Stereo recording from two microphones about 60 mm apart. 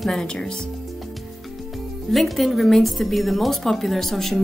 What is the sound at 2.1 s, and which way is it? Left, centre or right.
A woman's voice, centre.